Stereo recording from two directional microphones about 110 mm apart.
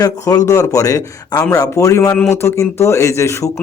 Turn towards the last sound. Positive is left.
turn(degrees=25)  # may be behind; listen again after turning